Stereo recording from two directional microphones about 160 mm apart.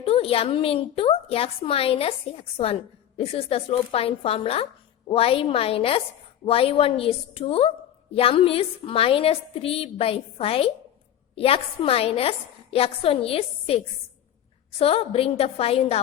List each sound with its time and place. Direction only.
0.0 s speech: 35° left (ahead or behind)
3.2 s speech: 35° left (ahead or behind)